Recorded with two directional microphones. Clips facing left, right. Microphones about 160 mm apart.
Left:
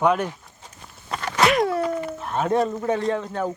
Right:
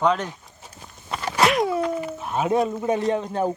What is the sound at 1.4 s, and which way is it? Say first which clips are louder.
Speech: left 1 dB; centre (ahead or behind).